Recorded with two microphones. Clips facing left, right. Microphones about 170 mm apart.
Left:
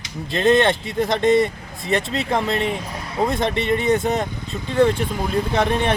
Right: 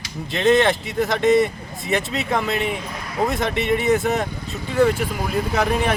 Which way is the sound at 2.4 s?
30° left (ahead or behind).